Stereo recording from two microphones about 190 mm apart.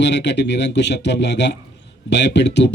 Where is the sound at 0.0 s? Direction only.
65° left (ahead or behind).